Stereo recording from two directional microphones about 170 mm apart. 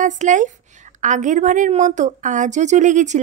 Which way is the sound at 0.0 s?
45° right (ahead or behind).